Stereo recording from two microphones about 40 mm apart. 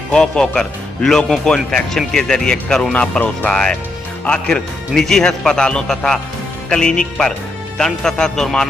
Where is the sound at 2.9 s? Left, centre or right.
Left.